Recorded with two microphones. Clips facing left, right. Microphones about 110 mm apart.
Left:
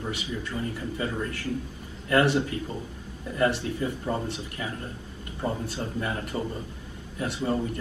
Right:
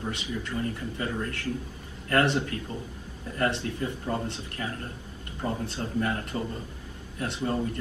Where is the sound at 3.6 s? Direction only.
20° left (ahead or behind).